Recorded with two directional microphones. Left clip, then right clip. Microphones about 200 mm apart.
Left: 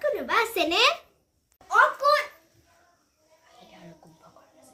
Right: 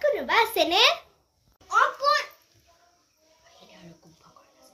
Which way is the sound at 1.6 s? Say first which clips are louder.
Left 2 dB; 15° left (ahead or behind).